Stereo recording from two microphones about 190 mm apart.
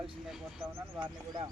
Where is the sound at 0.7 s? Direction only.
10° right (ahead or behind).